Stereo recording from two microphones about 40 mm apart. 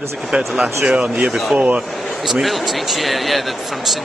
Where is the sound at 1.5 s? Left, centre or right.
Right.